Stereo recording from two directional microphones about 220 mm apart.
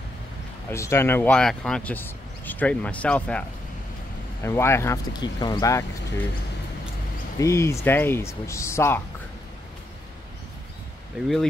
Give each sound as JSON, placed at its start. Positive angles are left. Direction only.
{"t": 0.7, "sound": "speech", "side_deg": 10}
{"t": 7.3, "sound": "speech", "side_deg": 15}